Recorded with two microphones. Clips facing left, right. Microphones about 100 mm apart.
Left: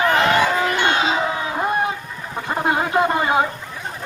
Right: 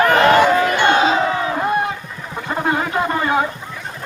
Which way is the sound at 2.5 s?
20° left (ahead or behind).